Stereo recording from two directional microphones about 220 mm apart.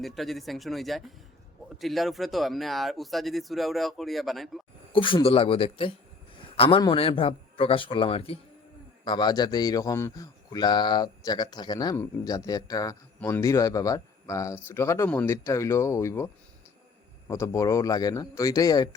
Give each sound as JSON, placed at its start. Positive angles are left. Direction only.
{"t": 0.0, "sound": "speech", "side_deg": 0}
{"t": 4.9, "sound": "a man's voice", "side_deg": 25}